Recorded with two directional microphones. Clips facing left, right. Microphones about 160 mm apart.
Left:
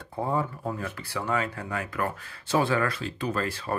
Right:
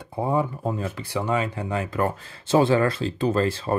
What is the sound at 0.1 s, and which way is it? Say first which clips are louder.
Speech: right 4 dB; 15° right (ahead or behind).